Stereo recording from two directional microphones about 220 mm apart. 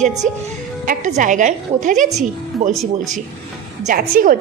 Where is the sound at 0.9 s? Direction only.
35° right (ahead or behind).